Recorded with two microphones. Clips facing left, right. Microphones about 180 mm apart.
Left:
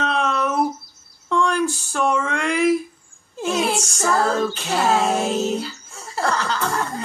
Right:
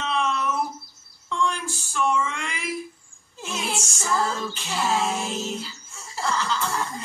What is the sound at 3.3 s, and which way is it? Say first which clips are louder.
Child singing: left 9 dB; 60° left (ahead or behind).